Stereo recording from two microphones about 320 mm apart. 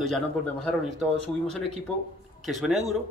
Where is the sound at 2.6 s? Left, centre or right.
Centre.